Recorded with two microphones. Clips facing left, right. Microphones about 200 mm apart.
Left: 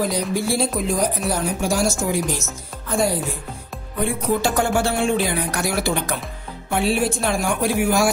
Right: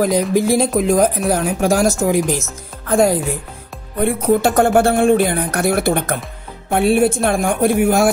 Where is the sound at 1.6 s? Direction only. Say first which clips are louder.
Right 7 dB; 90° right.